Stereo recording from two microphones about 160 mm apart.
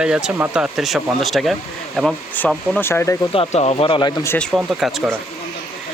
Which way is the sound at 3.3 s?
40° left (ahead or behind).